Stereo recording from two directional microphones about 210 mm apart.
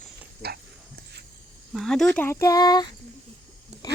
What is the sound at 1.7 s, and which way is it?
Speech, centre (ahead or behind).